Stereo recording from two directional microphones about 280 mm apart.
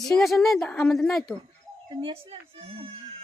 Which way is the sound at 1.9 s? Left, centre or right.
Centre.